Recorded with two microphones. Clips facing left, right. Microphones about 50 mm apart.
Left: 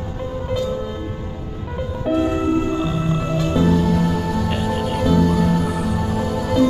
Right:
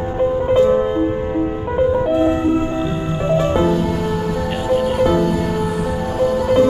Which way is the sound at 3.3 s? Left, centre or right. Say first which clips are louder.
Right 5 dB; right.